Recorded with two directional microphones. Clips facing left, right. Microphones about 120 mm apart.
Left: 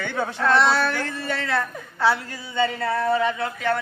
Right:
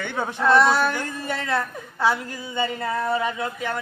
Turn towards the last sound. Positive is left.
turn(degrees=-15)  # may be behind; listen again after turning